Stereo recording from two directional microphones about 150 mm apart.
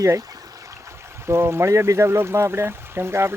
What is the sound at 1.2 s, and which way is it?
Speech, 15° right (ahead or behind).